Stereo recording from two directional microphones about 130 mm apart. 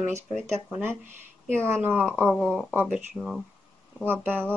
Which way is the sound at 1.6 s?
20° right (ahead or behind).